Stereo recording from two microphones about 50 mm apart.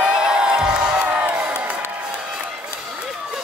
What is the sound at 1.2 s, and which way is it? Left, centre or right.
Crowd, right.